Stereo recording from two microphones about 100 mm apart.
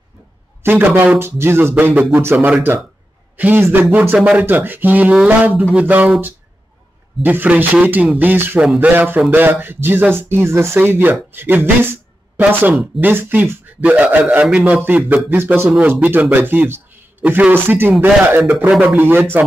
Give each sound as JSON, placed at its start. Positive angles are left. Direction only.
{"t": 0.6, "sound": "a man's voice", "side_deg": -20}
{"t": 7.2, "sound": "a man's voice", "side_deg": -15}
{"t": 13.0, "sound": "a man's voice", "side_deg": -20}
{"t": 18.7, "sound": "a man's voice", "side_deg": -10}
{"t": 18.9, "sound": "speech", "side_deg": -20}